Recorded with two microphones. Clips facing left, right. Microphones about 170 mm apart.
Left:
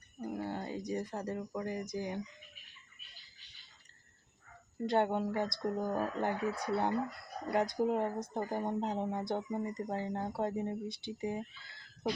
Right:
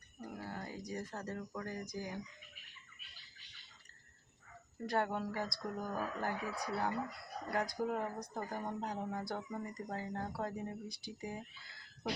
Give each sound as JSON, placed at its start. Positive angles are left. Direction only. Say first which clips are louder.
{"t": 0.2, "sound": "speech", "louder": "left 7 dB", "side_deg": 25}
{"t": 4.9, "sound": "speech", "louder": "left 5 dB", "side_deg": 25}